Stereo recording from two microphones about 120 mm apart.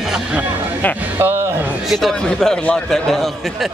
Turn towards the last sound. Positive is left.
turn(degrees=0)  # may be behind; listen again after turning